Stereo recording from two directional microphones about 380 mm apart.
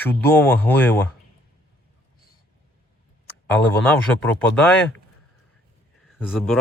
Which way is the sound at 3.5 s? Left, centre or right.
Centre.